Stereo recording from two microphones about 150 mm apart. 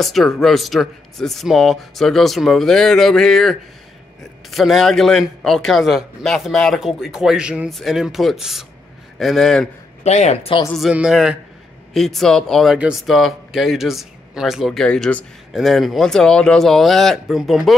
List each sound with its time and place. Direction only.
0.0 s a man's voice: centre (ahead or behind)
10.0 s speech: 45° left (ahead or behind)
10.7 s a man's voice: 5° right (ahead or behind)